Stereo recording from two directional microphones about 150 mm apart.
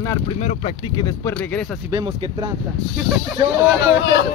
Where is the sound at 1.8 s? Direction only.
25° right (ahead or behind).